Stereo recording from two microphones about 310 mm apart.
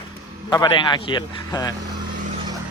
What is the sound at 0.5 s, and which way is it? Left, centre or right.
A man's voice, centre.